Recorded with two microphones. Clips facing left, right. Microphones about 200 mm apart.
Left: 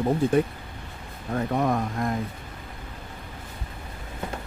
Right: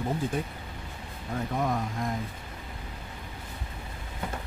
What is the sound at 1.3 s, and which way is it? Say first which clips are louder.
Speech: left 5 dB; 65° left (ahead or behind).